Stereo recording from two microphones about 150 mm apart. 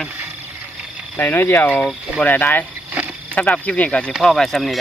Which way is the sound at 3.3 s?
10° left (ahead or behind).